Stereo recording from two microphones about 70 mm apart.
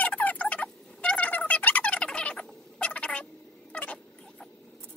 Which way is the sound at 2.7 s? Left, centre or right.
Centre.